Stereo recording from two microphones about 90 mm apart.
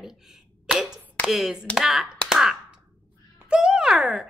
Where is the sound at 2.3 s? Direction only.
5° right (ahead or behind).